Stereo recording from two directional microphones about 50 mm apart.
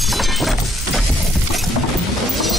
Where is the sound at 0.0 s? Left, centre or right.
Centre.